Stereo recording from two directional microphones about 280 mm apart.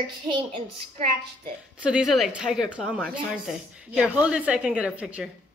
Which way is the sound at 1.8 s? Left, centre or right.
Centre.